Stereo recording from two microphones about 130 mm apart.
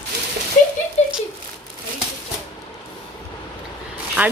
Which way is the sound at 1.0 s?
60° left (ahead or behind).